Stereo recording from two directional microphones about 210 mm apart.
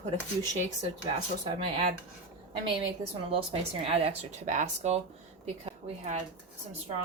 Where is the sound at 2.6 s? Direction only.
25° right (ahead or behind).